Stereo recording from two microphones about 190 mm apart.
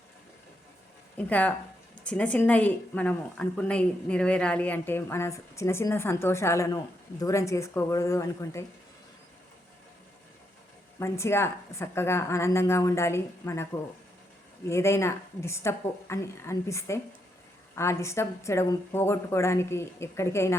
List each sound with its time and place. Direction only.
1.1 s a woman's voice: 10° left (ahead or behind)
11.0 s a woman's voice: 15° left (ahead or behind)
14.7 s a woman's voice: 15° left (ahead or behind)